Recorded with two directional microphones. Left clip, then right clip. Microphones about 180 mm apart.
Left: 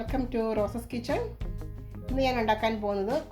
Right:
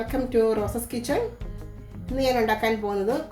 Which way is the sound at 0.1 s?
35° left (ahead or behind).